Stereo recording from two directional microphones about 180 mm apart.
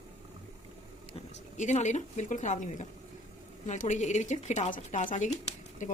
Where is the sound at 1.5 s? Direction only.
40° left (ahead or behind).